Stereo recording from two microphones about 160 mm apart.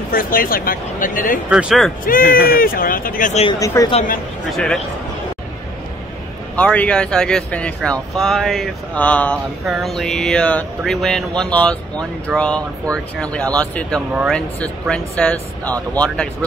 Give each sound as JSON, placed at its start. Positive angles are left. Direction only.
{"t": 0.1, "sound": "speech", "side_deg": 65}
{"t": 1.5, "sound": "speech", "side_deg": -5}
{"t": 2.0, "sound": "speech", "side_deg": 65}
{"t": 3.5, "sound": "speech", "side_deg": 20}
{"t": 6.5, "sound": "speech", "side_deg": 10}